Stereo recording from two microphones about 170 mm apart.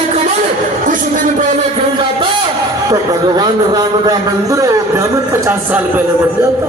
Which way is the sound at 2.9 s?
25° right (ahead or behind).